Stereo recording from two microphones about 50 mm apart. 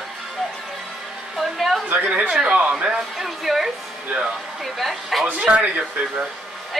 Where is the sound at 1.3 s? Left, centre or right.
Centre.